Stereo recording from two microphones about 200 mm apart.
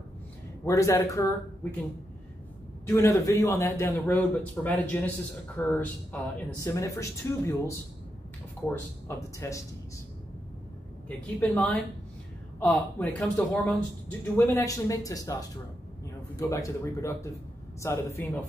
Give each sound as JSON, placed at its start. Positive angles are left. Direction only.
{"t": 0.7, "sound": "a man's voice", "side_deg": 15}
{"t": 2.9, "sound": "a man's voice", "side_deg": 15}
{"t": 11.1, "sound": "a man's voice", "side_deg": 5}
{"t": 16.3, "sound": "a man's voice", "side_deg": 15}